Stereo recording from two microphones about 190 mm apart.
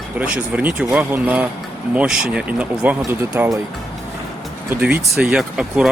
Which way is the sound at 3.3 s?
15° right (ahead or behind).